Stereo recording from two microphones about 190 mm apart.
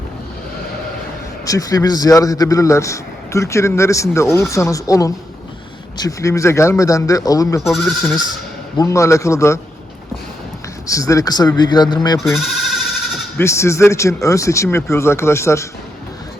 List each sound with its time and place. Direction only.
1.5 s a man's voice: 20° left (ahead or behind)
7.6 s speech: centre (ahead or behind)
8.8 s a man's voice: 15° left (ahead or behind)
10.8 s a man's voice: 15° left (ahead or behind)
13.3 s a man's voice: 15° left (ahead or behind)